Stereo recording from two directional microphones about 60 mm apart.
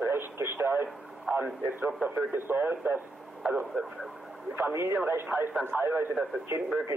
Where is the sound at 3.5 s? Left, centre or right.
Right.